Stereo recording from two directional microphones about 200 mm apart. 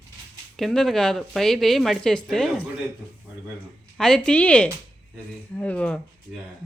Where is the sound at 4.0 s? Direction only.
5° left (ahead or behind).